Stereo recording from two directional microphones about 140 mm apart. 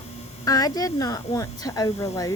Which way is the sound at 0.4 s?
25° left (ahead or behind).